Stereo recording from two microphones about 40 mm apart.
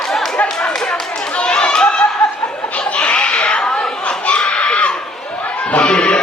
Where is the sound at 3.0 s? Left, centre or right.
Left.